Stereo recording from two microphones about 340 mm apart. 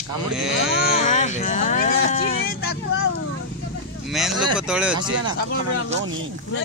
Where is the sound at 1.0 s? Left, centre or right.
Left.